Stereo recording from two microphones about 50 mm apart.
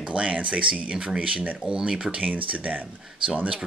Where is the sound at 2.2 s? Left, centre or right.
Right.